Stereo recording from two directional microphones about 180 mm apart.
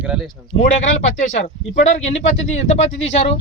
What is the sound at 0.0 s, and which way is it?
Speech, 5° right (ahead or behind).